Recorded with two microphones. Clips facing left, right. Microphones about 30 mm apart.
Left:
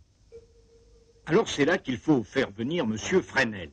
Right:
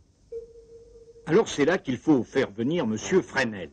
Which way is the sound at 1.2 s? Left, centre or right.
Centre.